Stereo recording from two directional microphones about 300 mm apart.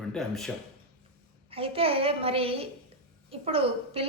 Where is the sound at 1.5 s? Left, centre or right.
Centre.